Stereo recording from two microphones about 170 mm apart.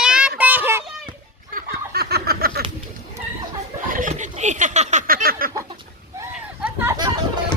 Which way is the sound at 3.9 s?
50° right (ahead or behind).